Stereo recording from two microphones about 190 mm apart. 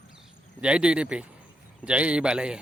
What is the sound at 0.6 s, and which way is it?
Speech, 5° right (ahead or behind).